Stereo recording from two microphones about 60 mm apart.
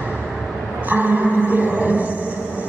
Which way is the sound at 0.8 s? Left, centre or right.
Right.